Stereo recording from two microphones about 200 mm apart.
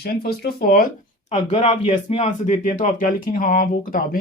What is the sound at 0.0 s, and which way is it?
Speech, 50° left (ahead or behind).